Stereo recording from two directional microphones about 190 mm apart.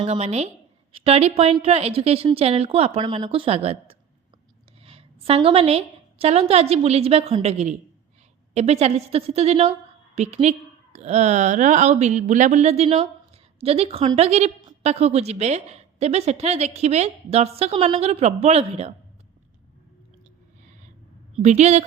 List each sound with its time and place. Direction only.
0.0 s a woman's voice: 35° right (ahead or behind)
21.3 s speech: 35° right (ahead or behind)